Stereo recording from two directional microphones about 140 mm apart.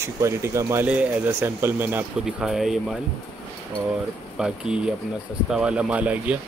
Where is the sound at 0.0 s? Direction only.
20° right (ahead or behind).